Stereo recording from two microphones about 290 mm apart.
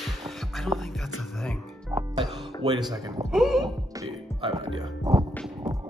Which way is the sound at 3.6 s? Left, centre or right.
Centre.